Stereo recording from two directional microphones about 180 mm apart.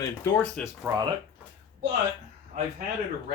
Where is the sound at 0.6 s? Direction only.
5° left (ahead or behind).